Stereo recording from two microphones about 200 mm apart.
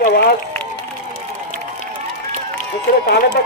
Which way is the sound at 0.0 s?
50° left (ahead or behind).